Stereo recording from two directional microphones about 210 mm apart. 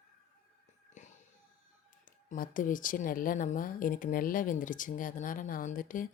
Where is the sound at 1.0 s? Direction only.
35° left (ahead or behind).